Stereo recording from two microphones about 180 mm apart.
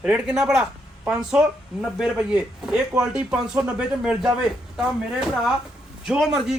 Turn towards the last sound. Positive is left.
turn(degrees=-5)  # may be behind; listen again after turning